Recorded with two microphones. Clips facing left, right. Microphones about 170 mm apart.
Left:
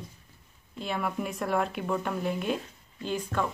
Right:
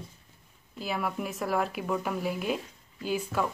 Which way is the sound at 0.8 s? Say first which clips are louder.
Left 1 dB; centre (ahead or behind).